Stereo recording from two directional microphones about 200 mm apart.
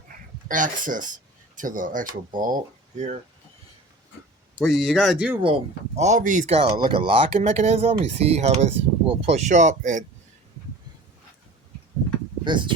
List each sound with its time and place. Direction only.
0.4 s speech: 40° right (ahead or behind)
4.6 s speech: centre (ahead or behind)
6.0 s speech: 35° right (ahead or behind)
6.7 s speech: 25° right (ahead or behind); by 10.0 s 40° right (ahead or behind)
12.5 s speech: 25° right (ahead or behind)